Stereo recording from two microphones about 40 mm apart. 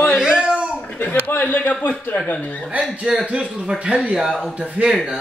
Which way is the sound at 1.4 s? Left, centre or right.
Left.